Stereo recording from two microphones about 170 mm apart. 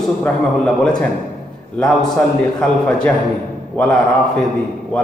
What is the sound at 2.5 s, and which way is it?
A man's voice, 5° left (ahead or behind).